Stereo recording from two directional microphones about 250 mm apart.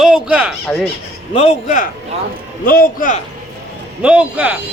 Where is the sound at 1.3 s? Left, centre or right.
Left.